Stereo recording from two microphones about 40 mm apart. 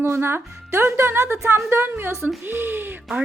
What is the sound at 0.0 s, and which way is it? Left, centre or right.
Speech, right.